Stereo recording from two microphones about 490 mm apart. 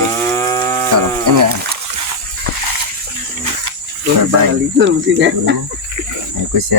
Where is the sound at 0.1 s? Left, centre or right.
Centre.